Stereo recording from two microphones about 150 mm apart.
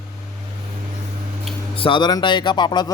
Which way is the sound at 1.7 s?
35° left (ahead or behind).